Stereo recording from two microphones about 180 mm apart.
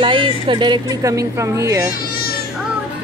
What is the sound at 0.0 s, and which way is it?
A woman's voice, 25° right (ahead or behind).